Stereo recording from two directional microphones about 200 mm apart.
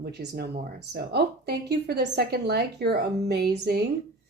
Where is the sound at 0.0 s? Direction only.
55° right (ahead or behind).